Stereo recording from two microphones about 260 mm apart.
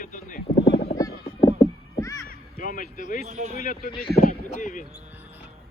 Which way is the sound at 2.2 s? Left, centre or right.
Left.